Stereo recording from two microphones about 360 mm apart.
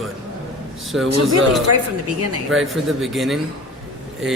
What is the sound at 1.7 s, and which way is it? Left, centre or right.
Speech, right.